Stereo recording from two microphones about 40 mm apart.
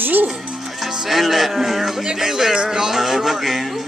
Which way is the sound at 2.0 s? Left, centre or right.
Centre.